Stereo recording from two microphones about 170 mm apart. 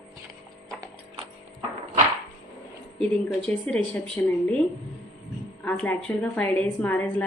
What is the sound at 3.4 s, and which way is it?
A woman's voice, 5° left (ahead or behind).